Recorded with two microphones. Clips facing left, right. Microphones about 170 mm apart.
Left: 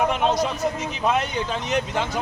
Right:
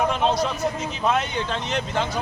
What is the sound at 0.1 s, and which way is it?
Speech, 10° left (ahead or behind).